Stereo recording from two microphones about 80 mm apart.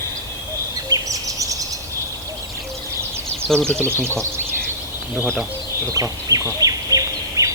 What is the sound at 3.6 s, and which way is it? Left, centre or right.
Speech, right.